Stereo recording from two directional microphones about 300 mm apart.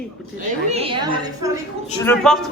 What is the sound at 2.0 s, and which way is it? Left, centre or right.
Speech, centre.